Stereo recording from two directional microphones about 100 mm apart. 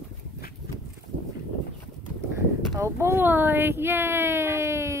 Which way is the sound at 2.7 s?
30° right (ahead or behind).